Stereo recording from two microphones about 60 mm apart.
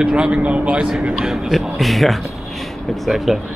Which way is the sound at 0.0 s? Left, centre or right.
Centre.